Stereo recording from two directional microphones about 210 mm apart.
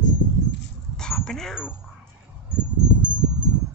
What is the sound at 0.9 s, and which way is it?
Dog, 5° left (ahead or behind).